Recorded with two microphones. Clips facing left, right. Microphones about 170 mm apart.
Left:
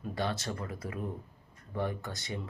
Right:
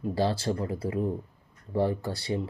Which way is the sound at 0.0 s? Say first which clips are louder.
Right 7 dB; 30° right (ahead or behind).